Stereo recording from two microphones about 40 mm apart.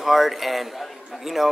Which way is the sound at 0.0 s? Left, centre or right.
Centre.